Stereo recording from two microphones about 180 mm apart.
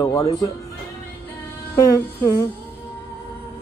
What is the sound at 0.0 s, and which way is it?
Speech, 20° left (ahead or behind).